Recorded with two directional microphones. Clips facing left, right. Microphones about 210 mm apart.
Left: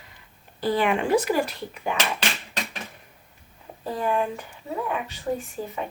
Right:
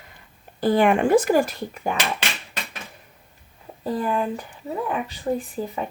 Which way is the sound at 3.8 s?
35° right (ahead or behind).